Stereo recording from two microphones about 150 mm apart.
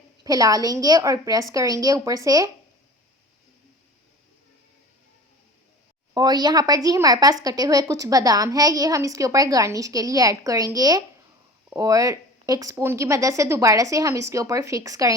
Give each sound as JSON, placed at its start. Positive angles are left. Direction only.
{"t": 0.3, "sound": "a woman's voice", "side_deg": -25}
{"t": 6.1, "sound": "a woman's voice", "side_deg": -25}